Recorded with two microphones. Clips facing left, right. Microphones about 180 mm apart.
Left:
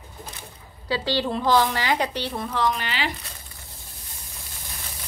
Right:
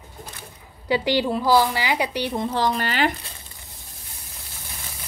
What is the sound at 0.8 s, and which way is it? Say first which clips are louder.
A woman's voice: right 4 dB; 15° right (ahead or behind).